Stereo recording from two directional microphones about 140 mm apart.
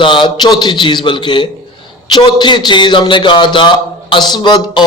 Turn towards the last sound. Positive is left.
turn(degrees=30)  # may be behind; listen again after turning